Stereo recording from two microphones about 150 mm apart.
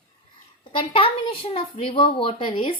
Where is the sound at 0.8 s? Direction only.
35° left (ahead or behind).